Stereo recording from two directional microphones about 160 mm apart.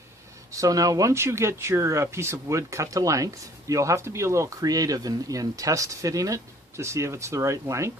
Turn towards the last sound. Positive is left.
turn(degrees=-20)  # may be behind; listen again after turning